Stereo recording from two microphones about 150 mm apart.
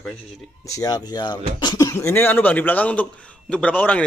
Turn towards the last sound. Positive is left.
turn(degrees=10)  # may be behind; listen again after turning